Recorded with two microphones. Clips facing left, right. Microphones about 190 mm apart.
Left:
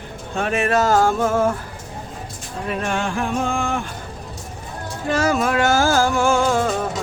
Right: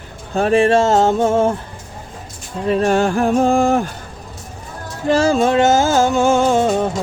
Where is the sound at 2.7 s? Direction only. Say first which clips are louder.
Right 9 dB; 35° right (ahead or behind).